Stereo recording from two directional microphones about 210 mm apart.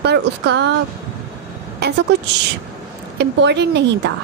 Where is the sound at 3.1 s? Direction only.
55° right (ahead or behind).